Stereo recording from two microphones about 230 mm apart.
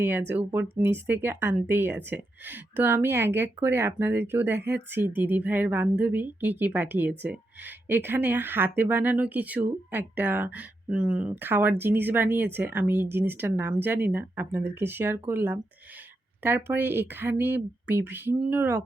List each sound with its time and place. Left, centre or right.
0.0 s a woman's voice: centre